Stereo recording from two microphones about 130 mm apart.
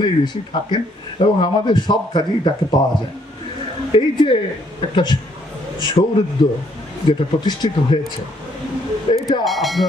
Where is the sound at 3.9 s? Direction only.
40° left (ahead or behind).